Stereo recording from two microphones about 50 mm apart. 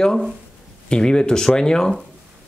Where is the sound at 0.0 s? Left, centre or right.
Centre.